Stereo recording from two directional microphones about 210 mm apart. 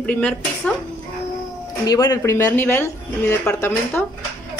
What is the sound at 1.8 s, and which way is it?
Speech, 15° left (ahead or behind).